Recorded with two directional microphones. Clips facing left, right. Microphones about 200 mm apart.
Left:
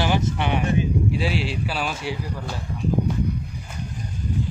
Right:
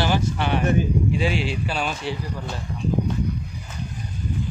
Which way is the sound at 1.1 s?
5° left (ahead or behind).